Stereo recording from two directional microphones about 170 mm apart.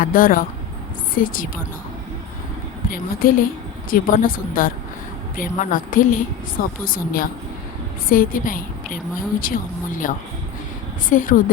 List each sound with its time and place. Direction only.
0.0 s a woman's voice: 55° left (ahead or behind)
2.9 s a woman's voice: 55° left (ahead or behind)